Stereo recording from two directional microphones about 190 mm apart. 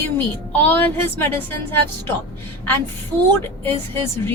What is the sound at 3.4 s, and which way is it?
Speech, 10° left (ahead or behind).